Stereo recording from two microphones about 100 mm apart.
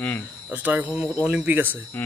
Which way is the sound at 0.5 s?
15° right (ahead or behind).